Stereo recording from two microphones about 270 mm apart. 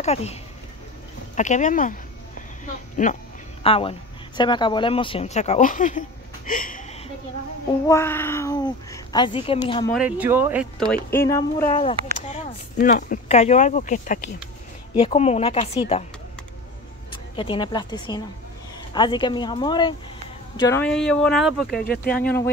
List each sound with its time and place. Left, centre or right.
0.0 s speech: left
7.8 s speech: centre
9.9 s speech: centre
12.2 s speech: left
17.1 s a woman's voice: centre
21.8 s speech: left